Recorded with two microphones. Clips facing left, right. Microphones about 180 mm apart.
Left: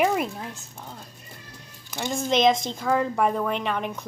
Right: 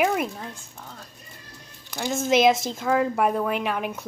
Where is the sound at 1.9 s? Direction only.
Centre (ahead or behind).